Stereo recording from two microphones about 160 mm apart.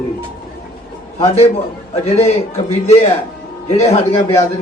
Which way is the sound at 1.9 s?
40° left (ahead or behind).